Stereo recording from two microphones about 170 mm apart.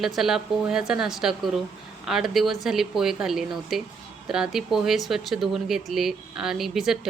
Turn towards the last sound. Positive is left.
turn(degrees=0)  # may be behind; listen again after turning